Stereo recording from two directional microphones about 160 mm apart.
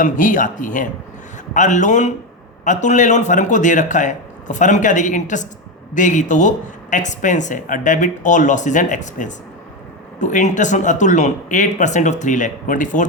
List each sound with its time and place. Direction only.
0.0 s speech: 55° left (ahead or behind)